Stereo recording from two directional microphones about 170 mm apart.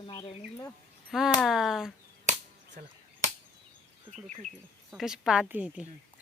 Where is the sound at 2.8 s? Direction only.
60° right (ahead or behind).